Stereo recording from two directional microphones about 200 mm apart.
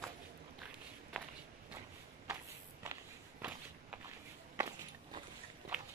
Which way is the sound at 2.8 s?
10° right (ahead or behind).